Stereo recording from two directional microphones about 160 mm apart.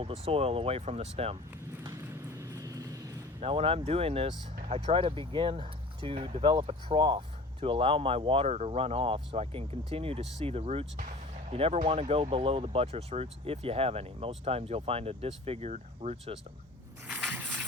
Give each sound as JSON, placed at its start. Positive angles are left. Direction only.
{"t": 0.0, "sound": "speech", "side_deg": -40}
{"t": 1.8, "sound": "vehicle", "side_deg": -20}
{"t": 3.4, "sound": "speech", "side_deg": -35}
{"t": 17.1, "sound": "a sound", "side_deg": -10}